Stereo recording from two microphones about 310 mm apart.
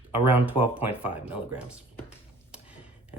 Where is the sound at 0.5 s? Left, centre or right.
Centre.